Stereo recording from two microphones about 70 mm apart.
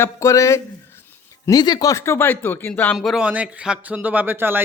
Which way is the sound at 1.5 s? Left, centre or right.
Left.